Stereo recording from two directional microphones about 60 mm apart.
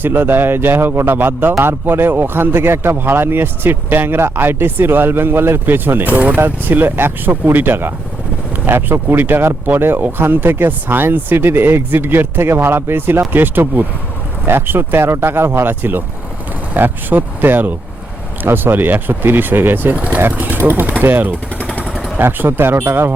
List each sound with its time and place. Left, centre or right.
0.0 s speech: right
21.6 s vehicle: left
22.2 s speech: right